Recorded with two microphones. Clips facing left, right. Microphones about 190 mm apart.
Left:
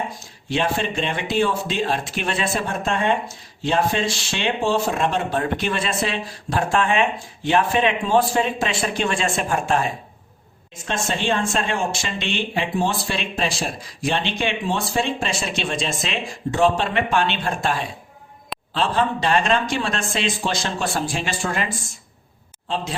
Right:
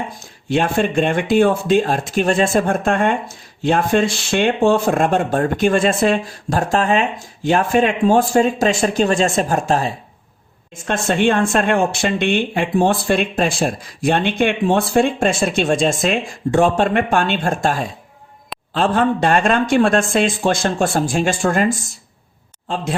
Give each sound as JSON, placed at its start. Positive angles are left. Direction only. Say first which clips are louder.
{"t": 0.5, "sound": "speech", "louder": "right 6 dB", "side_deg": -50}
{"t": 10.8, "sound": "speech", "louder": "right 7 dB", "side_deg": -55}